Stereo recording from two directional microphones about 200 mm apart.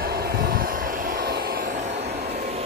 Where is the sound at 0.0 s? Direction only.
50° right (ahead or behind).